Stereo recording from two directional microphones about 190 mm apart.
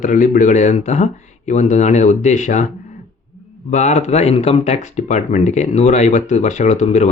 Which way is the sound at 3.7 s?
40° left (ahead or behind).